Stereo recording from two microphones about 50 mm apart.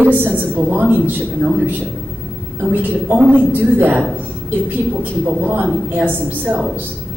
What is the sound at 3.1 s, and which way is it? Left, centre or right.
Speech, right.